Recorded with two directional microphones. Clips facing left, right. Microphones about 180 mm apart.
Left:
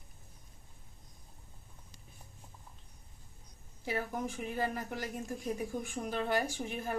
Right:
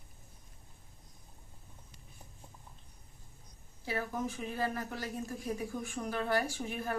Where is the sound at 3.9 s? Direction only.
15° left (ahead or behind).